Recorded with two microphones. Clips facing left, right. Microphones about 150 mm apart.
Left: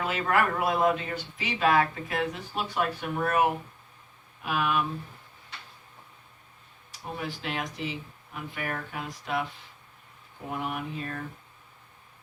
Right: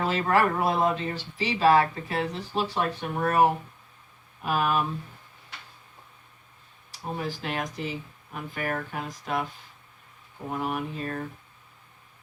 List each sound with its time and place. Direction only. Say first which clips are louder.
0.0 s speech: right 3 dB; 35° right (ahead or behind)
6.9 s speech: right 3 dB; 40° right (ahead or behind)
10.5 s speech: right 3 dB; 40° right (ahead or behind)